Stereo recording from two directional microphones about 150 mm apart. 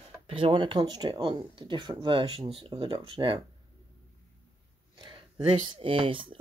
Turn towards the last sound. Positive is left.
turn(degrees=-35)  # may be behind; listen again after turning